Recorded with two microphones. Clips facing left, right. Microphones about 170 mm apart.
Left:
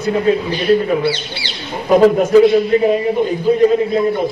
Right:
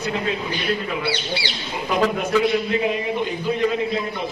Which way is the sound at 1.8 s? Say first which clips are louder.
Left 11 dB; 40° left (ahead or behind).